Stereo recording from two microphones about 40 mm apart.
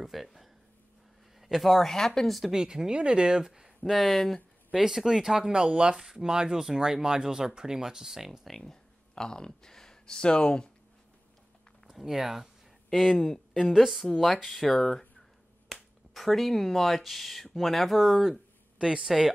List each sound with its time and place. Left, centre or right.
0.0 s a sound: centre
1.4 s speech: centre
2.5 s speech: centre
3.9 s speech: centre
4.7 s speech: centre
5.5 s speech: right
8.5 s speech: centre
11.9 s speech: centre
18.8 s speech: right